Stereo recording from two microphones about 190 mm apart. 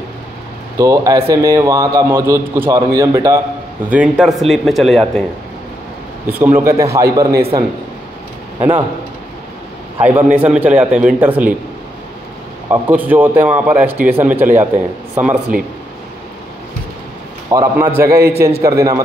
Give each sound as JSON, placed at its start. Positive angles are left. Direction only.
{"t": 0.7, "sound": "a man's voice", "side_deg": -15}
{"t": 6.2, "sound": "a man's voice", "side_deg": -10}
{"t": 8.5, "sound": "speech", "side_deg": -10}
{"t": 9.9, "sound": "a man's voice", "side_deg": -10}
{"t": 12.6, "sound": "a man's voice", "side_deg": -10}
{"t": 15.5, "sound": "speech", "side_deg": -45}
{"t": 17.5, "sound": "a man's voice", "side_deg": -15}